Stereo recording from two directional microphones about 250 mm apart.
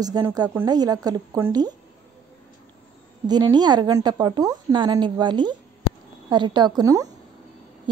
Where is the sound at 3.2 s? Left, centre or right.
Centre.